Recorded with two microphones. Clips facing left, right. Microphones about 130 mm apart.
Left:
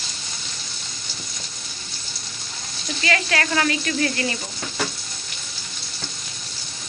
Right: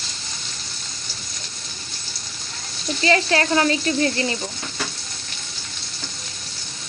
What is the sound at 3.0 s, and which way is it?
Speech, 30° right (ahead or behind).